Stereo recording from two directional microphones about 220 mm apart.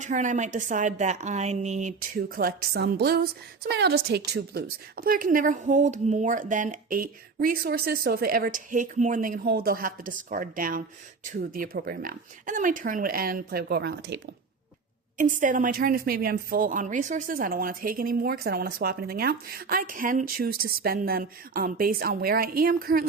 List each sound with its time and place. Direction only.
0.0 s a woman's voice: 35° right (ahead or behind)
15.2 s a woman's voice: 35° right (ahead or behind)